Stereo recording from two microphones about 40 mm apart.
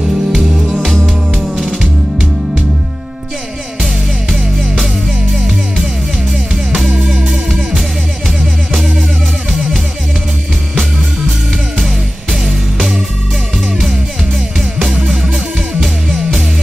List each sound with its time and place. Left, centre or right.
0.0 s music: centre
0.7 s music: centre